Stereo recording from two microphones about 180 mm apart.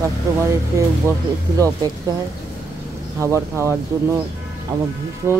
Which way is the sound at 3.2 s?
15° right (ahead or behind).